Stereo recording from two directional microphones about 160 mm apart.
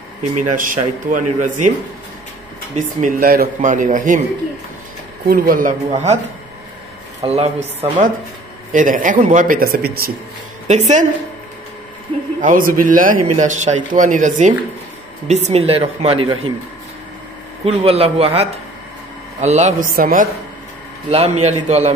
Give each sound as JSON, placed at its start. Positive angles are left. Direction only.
{"t": 0.6, "sound": "speech", "side_deg": -55}
{"t": 2.7, "sound": "a man's voice", "side_deg": -55}
{"t": 5.3, "sound": "a man's voice", "side_deg": -55}
{"t": 7.2, "sound": "a woman's voice", "side_deg": -40}
{"t": 8.7, "sound": "a man's voice", "side_deg": -55}
{"t": 10.7, "sound": "speech", "side_deg": -50}
{"t": 12.4, "sound": "a man's voice", "side_deg": -60}
{"t": 17.6, "sound": "a woman's voice", "side_deg": -40}
{"t": 21.1, "sound": "speech", "side_deg": -40}